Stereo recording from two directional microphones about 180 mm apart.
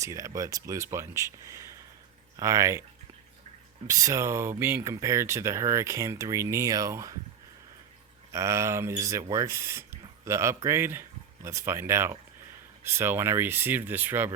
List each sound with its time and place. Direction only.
0.0 s speech: 15° right (ahead or behind)
3.8 s speech: 20° right (ahead or behind)
8.3 s speech: 15° right (ahead or behind)